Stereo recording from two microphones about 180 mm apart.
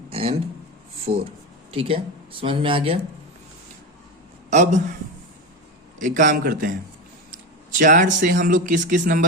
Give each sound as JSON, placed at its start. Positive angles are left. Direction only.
{"t": 0.1, "sound": "a sound", "side_deg": -30}
{"t": 1.1, "sound": "speech", "side_deg": -35}
{"t": 4.4, "sound": "a man's voice", "side_deg": -40}
{"t": 6.0, "sound": "speech", "side_deg": -45}